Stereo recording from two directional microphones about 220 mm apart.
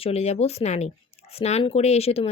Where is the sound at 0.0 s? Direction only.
30° left (ahead or behind).